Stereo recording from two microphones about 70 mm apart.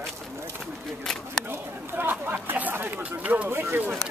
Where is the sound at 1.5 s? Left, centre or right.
Right.